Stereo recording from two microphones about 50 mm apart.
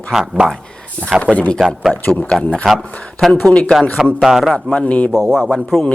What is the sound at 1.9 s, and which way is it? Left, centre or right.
Speech, centre.